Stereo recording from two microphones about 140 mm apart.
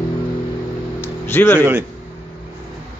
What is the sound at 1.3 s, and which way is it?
Speech, 15° left (ahead or behind).